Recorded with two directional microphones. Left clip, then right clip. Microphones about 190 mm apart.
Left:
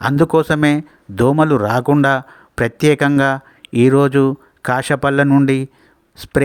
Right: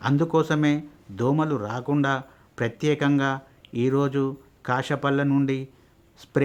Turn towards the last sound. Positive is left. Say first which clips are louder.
# left 13 dB
turn(degrees=40)  # may be behind; listen again after turning